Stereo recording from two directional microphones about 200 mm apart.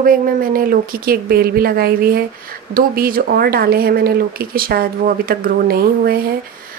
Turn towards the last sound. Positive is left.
turn(degrees=-50)  # may be behind; listen again after turning